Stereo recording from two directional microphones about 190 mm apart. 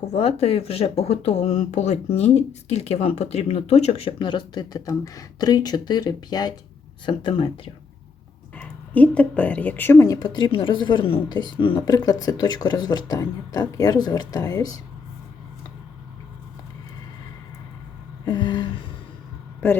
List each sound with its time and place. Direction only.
0.0 s a woman's voice: 35° left (ahead or behind)
8.5 s a woman's voice: 5° left (ahead or behind)
18.3 s a sound: 25° left (ahead or behind)
19.6 s a man's voice: 10° left (ahead or behind)